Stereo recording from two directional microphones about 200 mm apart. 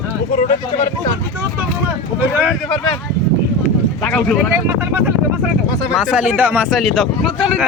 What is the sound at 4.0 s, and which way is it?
Speech, 5° left (ahead or behind).